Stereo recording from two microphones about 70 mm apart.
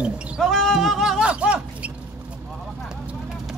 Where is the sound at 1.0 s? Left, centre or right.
Centre.